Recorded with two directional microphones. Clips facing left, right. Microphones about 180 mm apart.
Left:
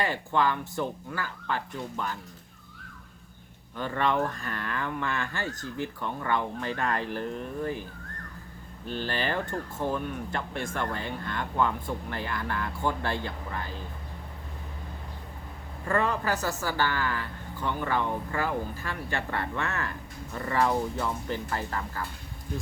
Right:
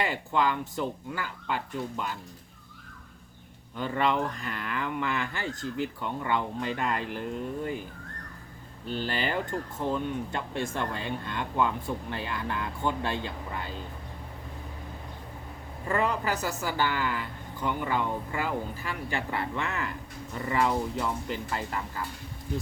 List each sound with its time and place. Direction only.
0.0 s speech: 15° right (ahead or behind)
3.8 s speech: 15° right (ahead or behind)
9.0 s speech: 15° right (ahead or behind)
15.9 s speech: 15° right (ahead or behind)